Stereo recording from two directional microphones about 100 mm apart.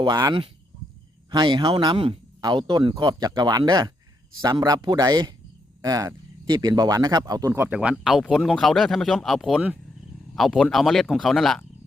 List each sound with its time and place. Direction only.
0.0 s speech: 40° right (ahead or behind)
7.5 s speech: 25° right (ahead or behind)
7.8 s speech: 5° right (ahead or behind)